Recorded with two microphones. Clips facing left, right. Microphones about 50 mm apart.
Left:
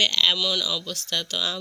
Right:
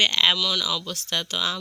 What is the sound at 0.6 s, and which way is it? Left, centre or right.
Speech, centre.